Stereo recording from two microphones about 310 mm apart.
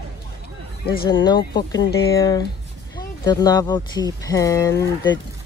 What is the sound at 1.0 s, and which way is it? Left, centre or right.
Speech, centre.